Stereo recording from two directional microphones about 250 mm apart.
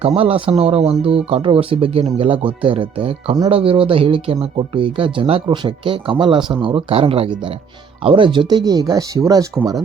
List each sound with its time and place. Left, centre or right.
0.0 s speech: right